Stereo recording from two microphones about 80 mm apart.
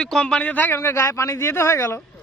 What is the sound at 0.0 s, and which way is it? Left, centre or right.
Speech, centre.